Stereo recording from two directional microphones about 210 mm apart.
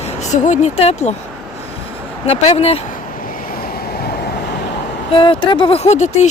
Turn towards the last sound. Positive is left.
turn(degrees=35)  # may be behind; listen again after turning